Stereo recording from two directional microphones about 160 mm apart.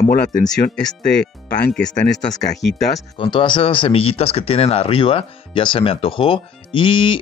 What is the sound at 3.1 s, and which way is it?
Speech, 30° left (ahead or behind).